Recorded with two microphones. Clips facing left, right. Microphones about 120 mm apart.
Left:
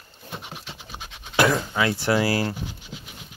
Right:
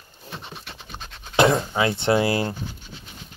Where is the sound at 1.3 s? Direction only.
25° right (ahead or behind).